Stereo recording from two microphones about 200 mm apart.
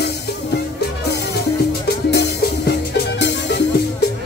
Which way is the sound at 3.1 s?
60° left (ahead or behind).